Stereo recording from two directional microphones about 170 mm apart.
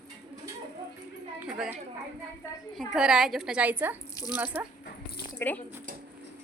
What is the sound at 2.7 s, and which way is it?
A woman's voice, 5° right (ahead or behind).